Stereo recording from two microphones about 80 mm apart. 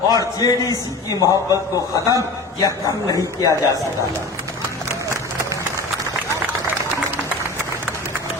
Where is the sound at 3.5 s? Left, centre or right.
Right.